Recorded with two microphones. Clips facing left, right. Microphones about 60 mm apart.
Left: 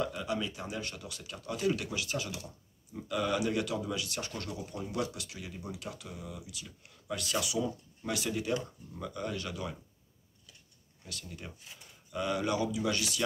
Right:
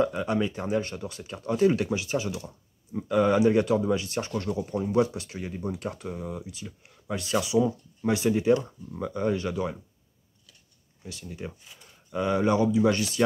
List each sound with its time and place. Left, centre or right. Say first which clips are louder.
0.0 s speech: right 8 dB; right
11.1 s speech: right 7 dB; centre